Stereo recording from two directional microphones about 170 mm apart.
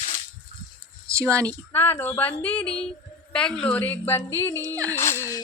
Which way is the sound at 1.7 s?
15° left (ahead or behind).